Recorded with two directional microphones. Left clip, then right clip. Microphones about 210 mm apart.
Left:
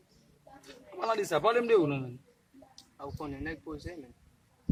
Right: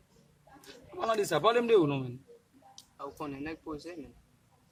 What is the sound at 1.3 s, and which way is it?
Speech, 5° right (ahead or behind).